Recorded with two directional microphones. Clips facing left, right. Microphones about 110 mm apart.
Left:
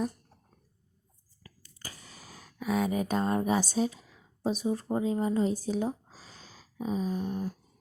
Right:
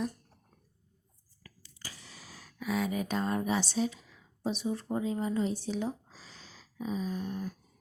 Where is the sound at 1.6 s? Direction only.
45° left (ahead or behind).